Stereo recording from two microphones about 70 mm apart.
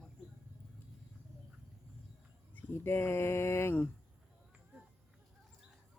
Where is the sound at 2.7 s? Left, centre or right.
Left.